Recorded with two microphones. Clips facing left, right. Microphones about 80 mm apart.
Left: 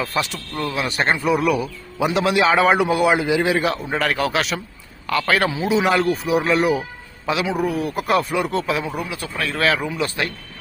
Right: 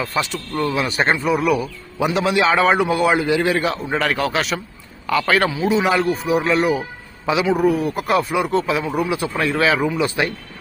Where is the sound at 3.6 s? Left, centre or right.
Centre.